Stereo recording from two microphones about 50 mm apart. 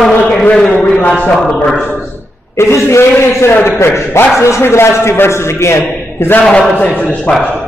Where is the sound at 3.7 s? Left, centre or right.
Left.